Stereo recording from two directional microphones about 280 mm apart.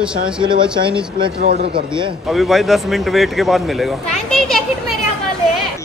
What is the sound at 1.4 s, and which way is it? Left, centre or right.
Speech, right.